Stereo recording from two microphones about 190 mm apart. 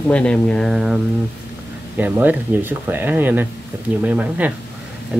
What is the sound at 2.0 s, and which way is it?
Speech, 10° right (ahead or behind).